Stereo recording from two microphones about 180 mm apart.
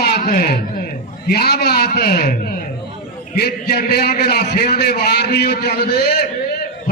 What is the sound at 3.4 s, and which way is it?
A man's voice, 60° left (ahead or behind).